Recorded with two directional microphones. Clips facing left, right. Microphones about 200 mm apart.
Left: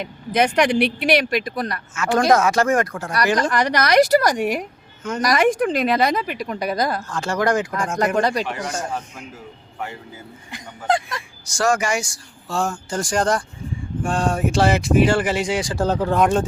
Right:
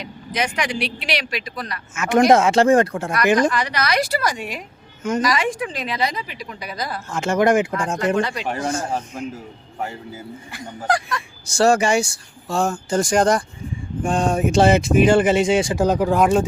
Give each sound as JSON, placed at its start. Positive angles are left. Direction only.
{"t": 0.0, "sound": "speech", "side_deg": 55}
{"t": 2.0, "sound": "speech", "side_deg": -20}
{"t": 3.5, "sound": "speech", "side_deg": 45}
{"t": 7.1, "sound": "speech", "side_deg": -20}
{"t": 8.1, "sound": "speech", "side_deg": 40}
{"t": 8.6, "sound": "speech", "side_deg": -30}
{"t": 10.8, "sound": "speech", "side_deg": 25}
{"t": 11.4, "sound": "speech", "side_deg": -30}